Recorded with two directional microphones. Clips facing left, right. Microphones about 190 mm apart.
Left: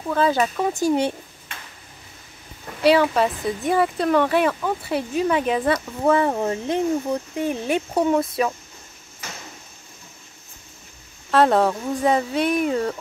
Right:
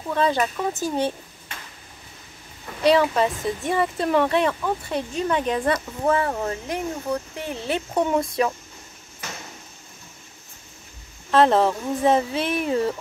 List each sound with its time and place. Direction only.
0.1 s speech: 5° left (ahead or behind)
2.8 s speech: 5° left (ahead or behind)
6.1 s speech: 20° left (ahead or behind); by 8.5 s 5° left (ahead or behind)
11.2 s speech: centre (ahead or behind)